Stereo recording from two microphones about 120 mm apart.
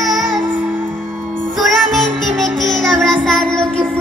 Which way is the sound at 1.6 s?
Centre (ahead or behind).